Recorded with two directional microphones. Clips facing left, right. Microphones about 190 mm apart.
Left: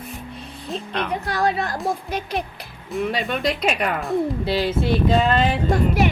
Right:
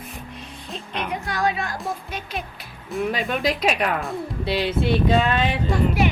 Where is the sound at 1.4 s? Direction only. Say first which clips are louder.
Left 2 dB; 35° left (ahead or behind).